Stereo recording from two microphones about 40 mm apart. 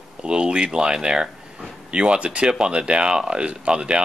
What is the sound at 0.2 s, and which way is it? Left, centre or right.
Speech, right.